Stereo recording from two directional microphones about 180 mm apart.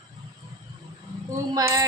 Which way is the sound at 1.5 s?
15° right (ahead or behind).